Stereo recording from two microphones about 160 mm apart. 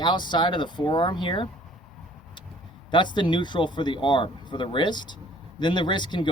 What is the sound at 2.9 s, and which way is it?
Speech, 30° left (ahead or behind).